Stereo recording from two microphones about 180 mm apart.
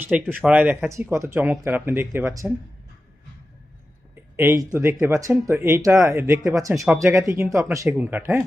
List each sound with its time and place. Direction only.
0.0 s speech: 10° right (ahead or behind)
4.1 s speech: 15° right (ahead or behind)